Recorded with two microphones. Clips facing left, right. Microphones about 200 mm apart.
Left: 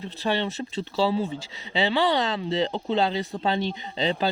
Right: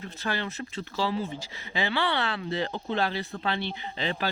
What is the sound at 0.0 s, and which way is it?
Speech, 20° left (ahead or behind).